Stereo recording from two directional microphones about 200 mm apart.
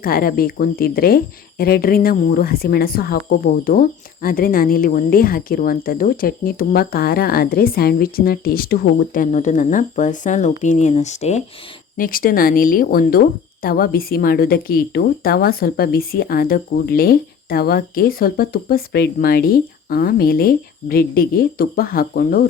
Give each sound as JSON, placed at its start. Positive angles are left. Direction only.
{"t": 0.0, "sound": "speech", "side_deg": 45}
{"t": 11.9, "sound": "speech", "side_deg": 45}